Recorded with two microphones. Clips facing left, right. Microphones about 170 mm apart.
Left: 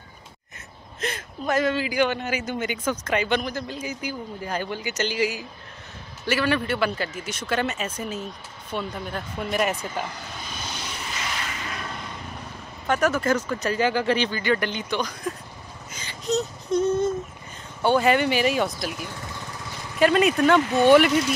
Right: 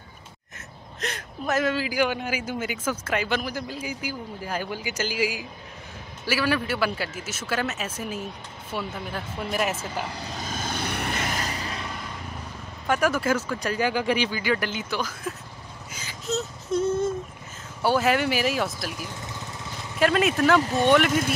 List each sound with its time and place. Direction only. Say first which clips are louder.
1.0 s speech: left 2 dB; centre (ahead or behind)
10.1 s vehicle: right 4 dB; 40° right (ahead or behind)
12.8 s speech: left 1 dB; 10° right (ahead or behind)
15.9 s a sound: left 4 dB; 5° right (ahead or behind)
17.8 s speech: left 2 dB; 5° right (ahead or behind)